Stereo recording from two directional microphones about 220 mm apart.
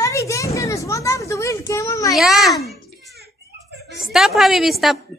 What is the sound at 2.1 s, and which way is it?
Speech, centre (ahead or behind).